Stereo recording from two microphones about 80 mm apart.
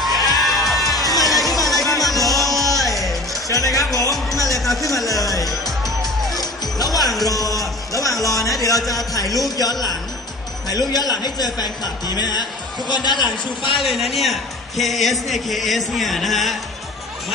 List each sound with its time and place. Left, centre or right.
0.0 s music: centre
3.4 s music: left
4.6 s music: centre
4.8 s speech: left
5.3 s music: centre
7.2 s speech: left
13.7 s a man's voice: centre